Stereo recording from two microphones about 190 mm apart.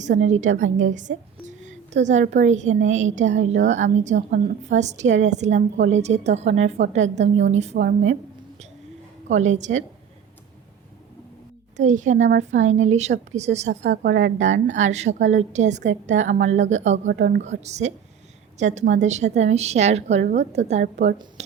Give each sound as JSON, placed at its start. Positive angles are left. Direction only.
{"t": 0.0, "sound": "a woman's voice", "side_deg": -40}
{"t": 0.9, "sound": "a sound", "side_deg": -40}
{"t": 2.3, "sound": "a woman's voice", "side_deg": -40}
{"t": 9.3, "sound": "a woman's voice", "side_deg": -40}
{"t": 11.8, "sound": "a woman's voice", "side_deg": -40}
{"t": 14.0, "sound": "a woman's voice", "side_deg": -65}
{"t": 14.3, "sound": "a woman's voice", "side_deg": -40}
{"t": 17.1, "sound": "a woman's voice", "side_deg": -60}
{"t": 17.4, "sound": "a woman's voice", "side_deg": -35}